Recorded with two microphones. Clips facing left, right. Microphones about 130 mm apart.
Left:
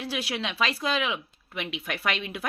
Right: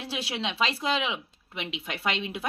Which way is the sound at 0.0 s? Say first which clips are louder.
Left 1 dB; 25° right (ahead or behind).